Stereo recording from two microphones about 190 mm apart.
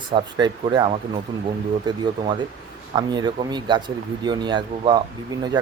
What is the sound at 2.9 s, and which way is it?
Speech, 20° right (ahead or behind).